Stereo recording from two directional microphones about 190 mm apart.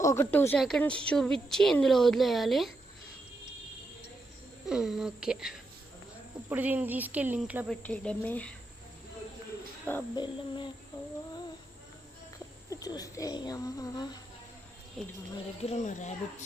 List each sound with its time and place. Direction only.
0.0 s speech: 15° left (ahead or behind)
4.6 s speech: 5° right (ahead or behind)
6.5 s cricket: 10° right (ahead or behind)
7.7 s speech: 5° left (ahead or behind)
10.2 s speech: 25° left (ahead or behind)
12.7 s speech: 20° left (ahead or behind)
15.7 s speech: 40° left (ahead or behind)